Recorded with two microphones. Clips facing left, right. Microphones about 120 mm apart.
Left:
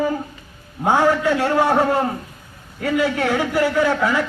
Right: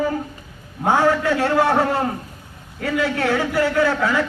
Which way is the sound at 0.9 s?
15° left (ahead or behind).